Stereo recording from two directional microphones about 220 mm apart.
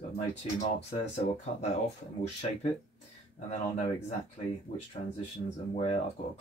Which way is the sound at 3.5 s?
30° left (ahead or behind).